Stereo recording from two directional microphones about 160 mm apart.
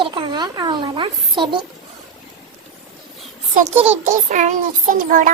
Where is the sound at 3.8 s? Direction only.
45° right (ahead or behind).